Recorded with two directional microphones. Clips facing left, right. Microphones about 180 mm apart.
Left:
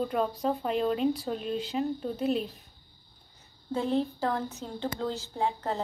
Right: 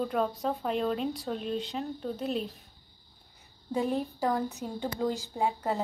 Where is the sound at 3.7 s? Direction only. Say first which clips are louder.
Left 1 dB; 15° right (ahead or behind).